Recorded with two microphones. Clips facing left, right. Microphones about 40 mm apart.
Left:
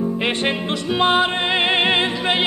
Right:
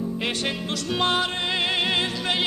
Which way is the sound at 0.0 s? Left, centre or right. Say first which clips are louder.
Left 6 dB; left.